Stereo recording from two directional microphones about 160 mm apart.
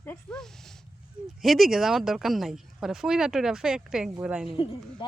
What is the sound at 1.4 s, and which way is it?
Speech, centre (ahead or behind).